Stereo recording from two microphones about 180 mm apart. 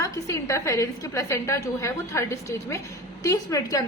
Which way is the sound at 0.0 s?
15° left (ahead or behind).